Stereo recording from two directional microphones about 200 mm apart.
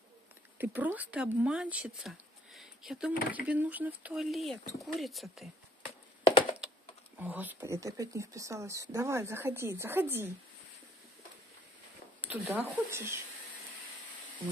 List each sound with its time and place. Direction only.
0.6 s speech: 10° right (ahead or behind)
7.2 s speech: 10° right (ahead or behind)
12.2 s speech: 10° right (ahead or behind)